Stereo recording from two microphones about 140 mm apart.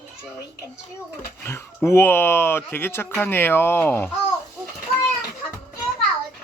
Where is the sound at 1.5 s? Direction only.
20° left (ahead or behind).